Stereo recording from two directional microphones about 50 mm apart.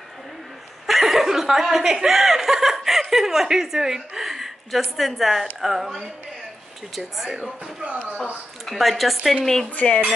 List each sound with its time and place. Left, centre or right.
0.8 s speech: centre
7.2 s speech: centre
7.8 s speech: right
8.6 s speech: centre
9.8 s speech: left